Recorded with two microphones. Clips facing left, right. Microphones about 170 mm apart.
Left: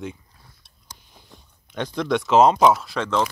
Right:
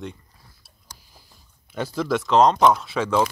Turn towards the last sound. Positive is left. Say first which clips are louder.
# right 2 dB
turn(degrees=-5)  # may be behind; listen again after turning